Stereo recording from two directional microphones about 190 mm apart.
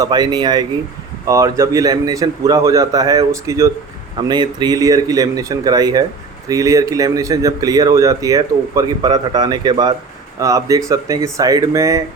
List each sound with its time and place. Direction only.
0.0 s a man's voice: 20° right (ahead or behind)